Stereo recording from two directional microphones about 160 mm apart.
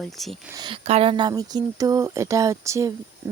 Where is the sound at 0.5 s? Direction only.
25° right (ahead or behind).